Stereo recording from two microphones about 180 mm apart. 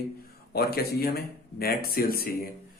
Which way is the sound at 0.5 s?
60° left (ahead or behind).